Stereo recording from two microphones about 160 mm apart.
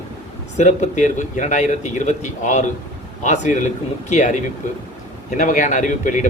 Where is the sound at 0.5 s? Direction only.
45° left (ahead or behind).